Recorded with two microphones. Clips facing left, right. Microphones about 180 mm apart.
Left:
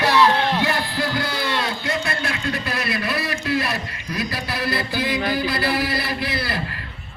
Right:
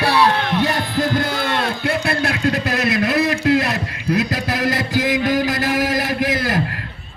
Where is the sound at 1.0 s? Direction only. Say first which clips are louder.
Right 4 dB; 50° right (ahead or behind); by 3.2 s 80° right.